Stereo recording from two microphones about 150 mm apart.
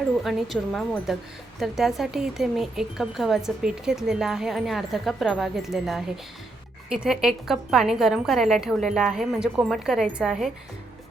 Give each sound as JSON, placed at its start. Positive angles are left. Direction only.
{"t": 0.2, "sound": "speech", "side_deg": 0}